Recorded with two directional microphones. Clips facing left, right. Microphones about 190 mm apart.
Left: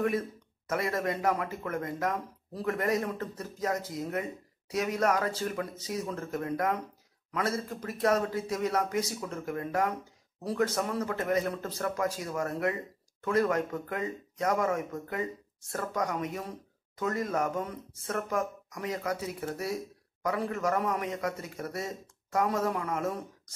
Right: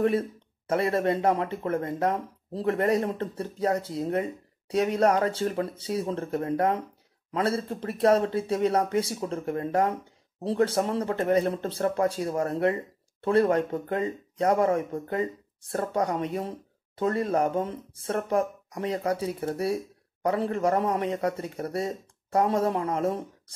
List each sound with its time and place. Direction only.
0.0 s speech: 30° right (ahead or behind)